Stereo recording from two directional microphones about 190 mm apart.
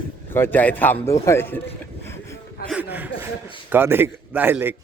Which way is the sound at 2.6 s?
55° left (ahead or behind).